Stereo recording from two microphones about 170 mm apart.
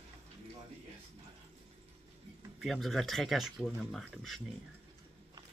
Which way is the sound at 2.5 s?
Centre (ahead or behind).